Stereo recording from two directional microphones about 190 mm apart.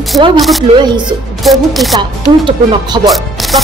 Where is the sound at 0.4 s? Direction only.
Centre (ahead or behind).